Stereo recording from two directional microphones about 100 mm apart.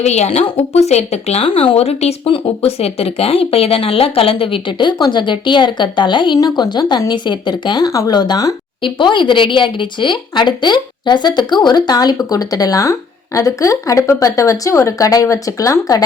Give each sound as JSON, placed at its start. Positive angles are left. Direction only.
{"t": 0.0, "sound": "speech", "side_deg": 90}
{"t": 8.8, "sound": "speech", "side_deg": 55}